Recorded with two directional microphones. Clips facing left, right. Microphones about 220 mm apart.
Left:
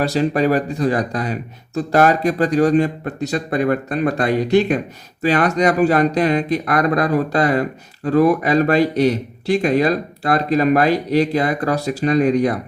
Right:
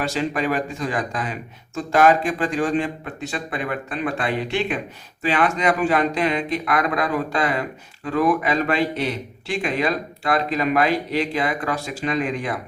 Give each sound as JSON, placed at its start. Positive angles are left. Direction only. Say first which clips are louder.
{"t": 0.0, "sound": "speech", "louder": "left 6 dB", "side_deg": 35}